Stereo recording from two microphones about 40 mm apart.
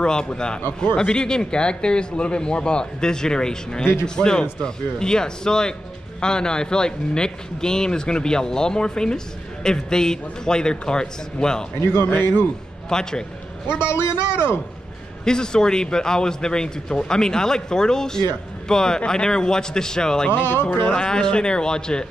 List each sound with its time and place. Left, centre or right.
0.0 s speech: left
11.8 s a man's voice: left
12.1 s a man's voice: left
12.9 s a man's voice: centre
15.2 s a man's voice: centre
20.2 s a man's voice: left
20.8 s speech: left